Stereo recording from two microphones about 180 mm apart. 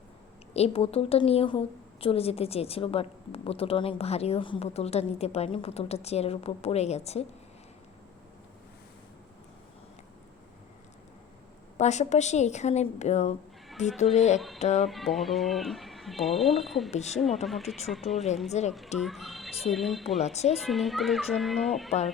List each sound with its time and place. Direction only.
0.5 s a woman's voice: 35° left (ahead or behind)
11.8 s a woman's voice: 40° left (ahead or behind)
14.8 s speech: centre (ahead or behind)
16.9 s a woman's voice: 40° left (ahead or behind)
17.4 s speech: centre (ahead or behind)
18.5 s a woman's voice: 40° left (ahead or behind)
18.9 s speech: centre (ahead or behind)
20.1 s a woman's voice: 40° left (ahead or behind)
20.7 s speech: centre (ahead or behind)